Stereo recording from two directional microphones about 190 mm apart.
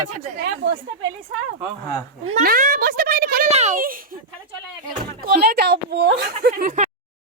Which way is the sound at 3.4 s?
35° right (ahead or behind).